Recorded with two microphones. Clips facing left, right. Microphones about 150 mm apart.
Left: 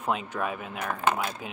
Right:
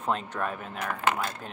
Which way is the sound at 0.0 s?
5° left (ahead or behind).